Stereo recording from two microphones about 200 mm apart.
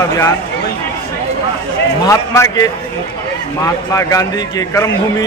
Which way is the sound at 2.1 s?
15° left (ahead or behind).